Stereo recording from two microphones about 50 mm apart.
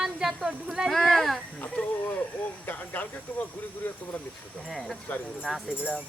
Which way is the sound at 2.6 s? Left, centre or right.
Left.